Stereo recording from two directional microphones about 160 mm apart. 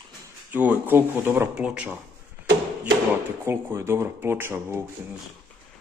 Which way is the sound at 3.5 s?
15° right (ahead or behind).